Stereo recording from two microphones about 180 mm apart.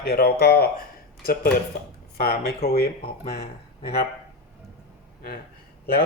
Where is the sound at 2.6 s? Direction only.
60° left (ahead or behind).